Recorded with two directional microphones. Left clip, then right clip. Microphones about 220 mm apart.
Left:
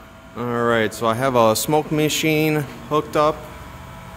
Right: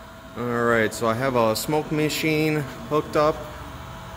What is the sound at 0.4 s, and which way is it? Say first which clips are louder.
Speech: left 2 dB; 20° left (ahead or behind).